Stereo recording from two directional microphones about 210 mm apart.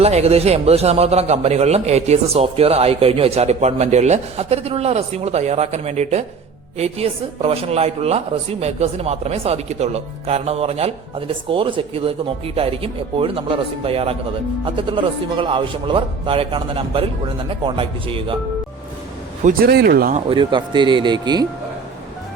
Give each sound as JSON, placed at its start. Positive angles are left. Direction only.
{"t": 0.0, "sound": "a man's voice", "side_deg": -30}
{"t": 19.5, "sound": "speech", "side_deg": -45}
{"t": 20.1, "sound": "a man's voice", "side_deg": -25}